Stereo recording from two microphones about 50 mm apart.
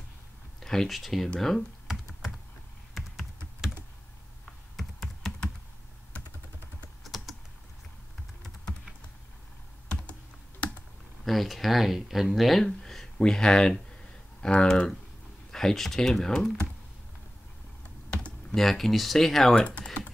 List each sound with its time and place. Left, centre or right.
0.6 s a sound: centre
0.8 s speech: centre
2.9 s computer keyboard: centre
4.7 s computer keyboard: centre
7.0 s typing: centre
10.6 s computer keyboard: left
11.2 s speech: centre
15.5 s speech: centre
18.5 s speech: centre
19.5 s speech: centre